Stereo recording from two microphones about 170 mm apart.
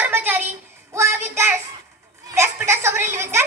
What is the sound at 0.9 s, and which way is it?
Child singing, 15° right (ahead or behind).